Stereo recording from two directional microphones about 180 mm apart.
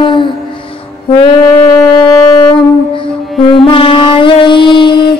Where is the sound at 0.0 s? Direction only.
25° left (ahead or behind).